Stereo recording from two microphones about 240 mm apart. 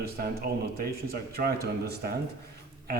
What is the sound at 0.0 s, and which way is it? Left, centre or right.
A man's voice, right.